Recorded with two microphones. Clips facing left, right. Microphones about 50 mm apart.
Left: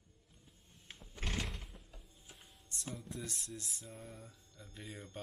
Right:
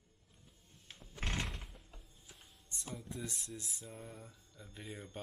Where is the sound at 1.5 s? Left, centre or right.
Centre.